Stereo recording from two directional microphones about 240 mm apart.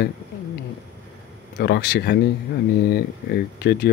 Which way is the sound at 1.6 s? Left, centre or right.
Left.